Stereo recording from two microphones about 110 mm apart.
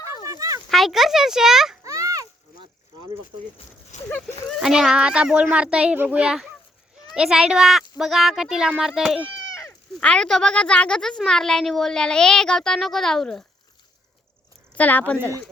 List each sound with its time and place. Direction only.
0.3 s dog: 30° right (ahead or behind)
0.7 s speech: centre (ahead or behind)
1.8 s a sound: 30° right (ahead or behind)
3.9 s speech: 90° left
4.4 s a child's voice: 5° right (ahead or behind)
10.0 s a woman's voice: 10° left (ahead or behind)
14.8 s a woman's voice: 15° left (ahead or behind)